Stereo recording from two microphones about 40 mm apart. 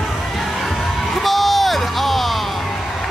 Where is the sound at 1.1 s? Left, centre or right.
Centre.